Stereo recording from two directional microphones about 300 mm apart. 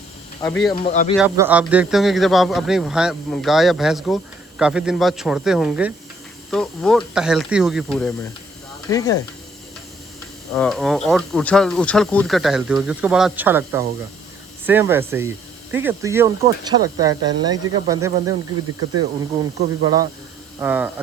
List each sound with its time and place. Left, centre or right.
0.8 s speech: left
1.1 s a man's voice: centre
8.9 s speech: centre
10.5 s a man's voice: centre